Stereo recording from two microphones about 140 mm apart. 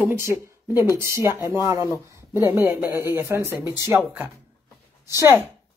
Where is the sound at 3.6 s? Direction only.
30° left (ahead or behind).